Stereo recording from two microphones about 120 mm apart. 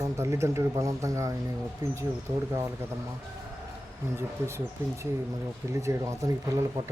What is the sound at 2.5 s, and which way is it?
Speech, 20° right (ahead or behind).